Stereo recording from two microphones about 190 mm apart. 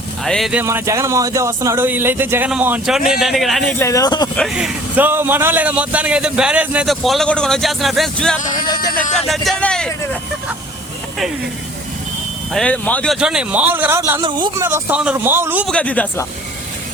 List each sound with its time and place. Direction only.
0.3 s a man's voice: centre (ahead or behind)
0.6 s a man's voice: 15° right (ahead or behind); by 3.8 s centre (ahead or behind)
3.8 s speech: 15° left (ahead or behind)
4.4 s a man's voice: centre (ahead or behind)
8.5 s speech: 20° left (ahead or behind)
9.1 s a man's voice: centre (ahead or behind)
12.5 s a man's voice: 5° left (ahead or behind)
13.1 s speech: 5° right (ahead or behind)
14.2 s speech: 25° right (ahead or behind)
14.6 s speech: 10° right (ahead or behind)
15.6 s speech: 5° left (ahead or behind)